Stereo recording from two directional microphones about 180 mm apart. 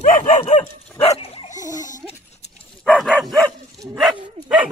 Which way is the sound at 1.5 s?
20° left (ahead or behind).